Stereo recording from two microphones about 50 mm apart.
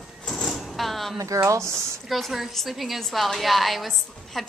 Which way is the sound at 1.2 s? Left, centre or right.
Right.